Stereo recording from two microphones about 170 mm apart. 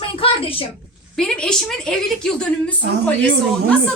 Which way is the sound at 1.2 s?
5° left (ahead or behind).